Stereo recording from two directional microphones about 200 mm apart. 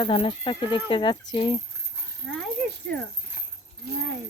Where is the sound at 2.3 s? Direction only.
Centre (ahead or behind).